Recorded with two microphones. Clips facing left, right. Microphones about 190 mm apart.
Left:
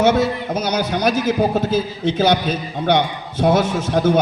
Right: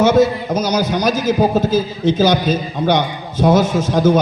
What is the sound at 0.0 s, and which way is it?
A man's voice, 60° left (ahead or behind).